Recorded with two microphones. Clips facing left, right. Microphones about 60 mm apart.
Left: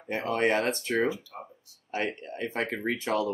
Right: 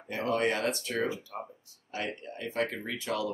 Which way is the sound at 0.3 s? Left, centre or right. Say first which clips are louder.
Left 3 dB; left.